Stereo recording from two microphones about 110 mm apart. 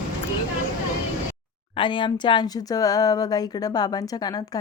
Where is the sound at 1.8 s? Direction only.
45° left (ahead or behind).